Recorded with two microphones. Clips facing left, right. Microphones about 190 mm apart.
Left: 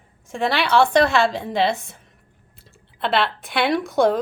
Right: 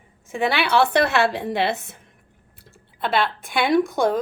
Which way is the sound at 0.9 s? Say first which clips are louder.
Left 2 dB; 60° right (ahead or behind).